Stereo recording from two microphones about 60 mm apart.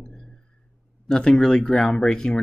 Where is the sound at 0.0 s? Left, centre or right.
Centre.